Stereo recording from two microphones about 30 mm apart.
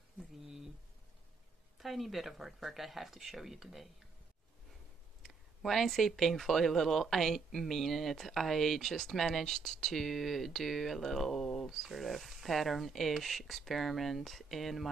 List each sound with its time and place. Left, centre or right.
1.8 s speech: centre
5.2 s speech: centre
11.3 s a sound: centre
11.7 s speech: centre